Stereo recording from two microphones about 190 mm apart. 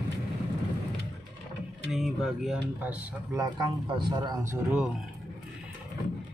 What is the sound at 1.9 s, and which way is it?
Speech, centre (ahead or behind).